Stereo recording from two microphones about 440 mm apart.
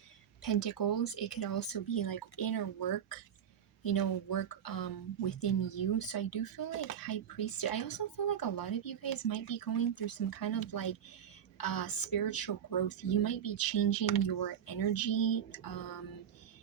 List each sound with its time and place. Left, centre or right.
0.4 s speech: left